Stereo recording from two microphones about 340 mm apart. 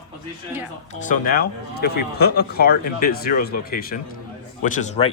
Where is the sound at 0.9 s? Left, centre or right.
Left.